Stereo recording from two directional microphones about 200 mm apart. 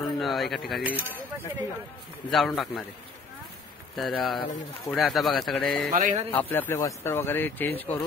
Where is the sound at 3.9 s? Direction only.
Centre (ahead or behind).